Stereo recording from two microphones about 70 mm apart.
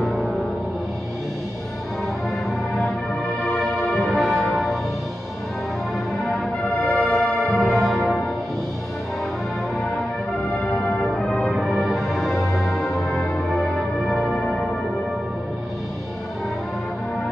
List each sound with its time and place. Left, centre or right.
0.0 s music: centre
2.7 s music: centre
6.9 s music: centre
10.5 s music: centre
11.5 s music: centre